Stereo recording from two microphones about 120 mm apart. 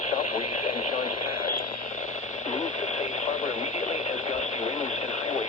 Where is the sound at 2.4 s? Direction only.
75° left (ahead or behind).